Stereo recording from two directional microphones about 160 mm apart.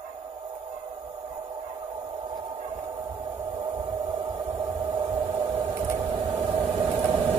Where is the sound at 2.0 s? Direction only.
25° right (ahead or behind).